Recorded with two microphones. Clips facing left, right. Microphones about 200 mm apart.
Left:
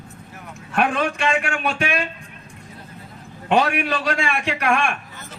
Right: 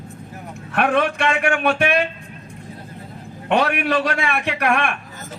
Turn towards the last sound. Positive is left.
turn(degrees=-60)  # may be behind; listen again after turning